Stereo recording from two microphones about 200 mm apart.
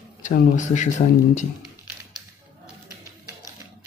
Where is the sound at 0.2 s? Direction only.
40° left (ahead or behind).